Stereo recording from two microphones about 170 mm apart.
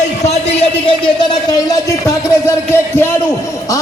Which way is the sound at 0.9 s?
25° left (ahead or behind).